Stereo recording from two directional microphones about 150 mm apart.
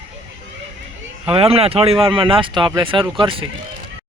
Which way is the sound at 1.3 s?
40° right (ahead or behind).